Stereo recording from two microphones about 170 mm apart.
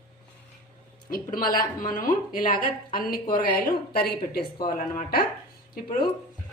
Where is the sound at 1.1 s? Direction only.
55° left (ahead or behind).